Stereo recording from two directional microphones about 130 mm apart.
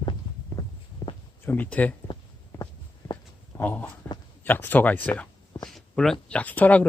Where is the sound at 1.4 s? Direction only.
15° left (ahead or behind).